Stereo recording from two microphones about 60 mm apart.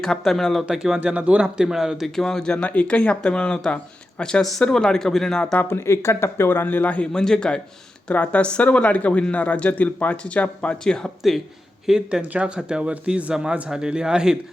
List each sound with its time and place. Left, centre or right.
0.0 s speech: centre
0.7 s speech: centre
0.9 s speech: right
1.5 s speech: centre
2.1 s speech: centre
5.5 s speech: left
7.1 s speech: centre
11.9 s speech: centre
12.2 s speech: right